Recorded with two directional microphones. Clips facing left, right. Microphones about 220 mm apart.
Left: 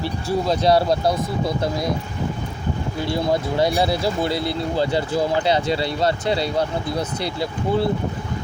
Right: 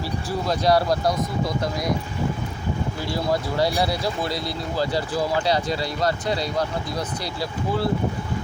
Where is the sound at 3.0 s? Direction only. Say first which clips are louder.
Left 4 dB; 25° left (ahead or behind).